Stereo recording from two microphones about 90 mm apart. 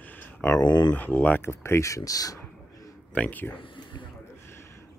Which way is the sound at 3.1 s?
15° left (ahead or behind).